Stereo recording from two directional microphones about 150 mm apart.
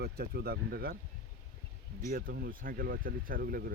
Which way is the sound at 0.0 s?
90° right.